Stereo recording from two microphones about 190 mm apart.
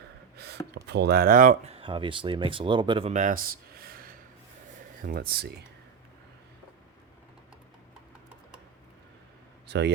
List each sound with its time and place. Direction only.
0.3 s speech: 60° right (ahead or behind); by 1.7 s 45° right (ahead or behind)
1.7 s speech: 25° right (ahead or behind)
3.1 s a sound: 40° right (ahead or behind)
5.0 s speech: 50° right (ahead or behind)
9.6 s speech: 65° right (ahead or behind)